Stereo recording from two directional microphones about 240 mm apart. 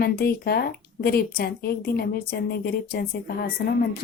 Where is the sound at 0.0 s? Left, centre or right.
Left.